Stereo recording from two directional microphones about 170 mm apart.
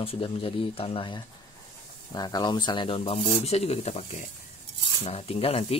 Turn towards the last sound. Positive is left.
turn(degrees=35)  # may be behind; listen again after turning